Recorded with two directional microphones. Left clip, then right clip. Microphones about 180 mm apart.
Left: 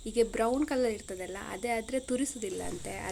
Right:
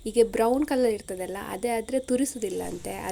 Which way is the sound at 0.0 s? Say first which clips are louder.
Right 6 dB; 20° right (ahead or behind).